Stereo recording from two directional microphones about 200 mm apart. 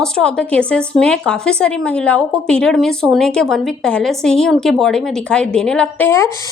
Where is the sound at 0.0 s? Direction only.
5° left (ahead or behind).